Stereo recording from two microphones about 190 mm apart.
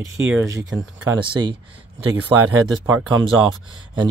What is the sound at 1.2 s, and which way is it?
Speech, 25° right (ahead or behind).